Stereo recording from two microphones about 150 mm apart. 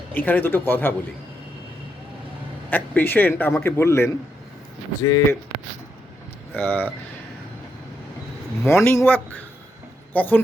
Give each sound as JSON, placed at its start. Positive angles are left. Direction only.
{"t": 0.1, "sound": "a man's voice", "side_deg": 10}
{"t": 2.6, "sound": "a man's voice", "side_deg": 10}
{"t": 6.6, "sound": "a man's voice", "side_deg": 10}
{"t": 8.6, "sound": "speech", "side_deg": 15}